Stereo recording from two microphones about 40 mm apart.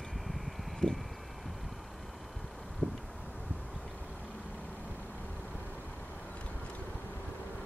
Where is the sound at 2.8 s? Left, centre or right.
Right.